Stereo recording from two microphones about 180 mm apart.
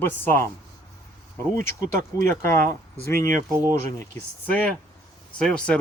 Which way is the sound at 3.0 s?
15° left (ahead or behind).